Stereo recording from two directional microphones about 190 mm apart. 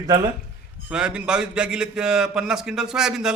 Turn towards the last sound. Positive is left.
turn(degrees=-5)  # may be behind; listen again after turning